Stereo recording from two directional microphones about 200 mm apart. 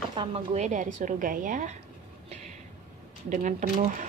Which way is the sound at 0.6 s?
40° right (ahead or behind).